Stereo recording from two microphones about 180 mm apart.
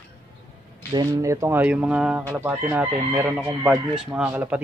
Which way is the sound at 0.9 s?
20° right (ahead or behind).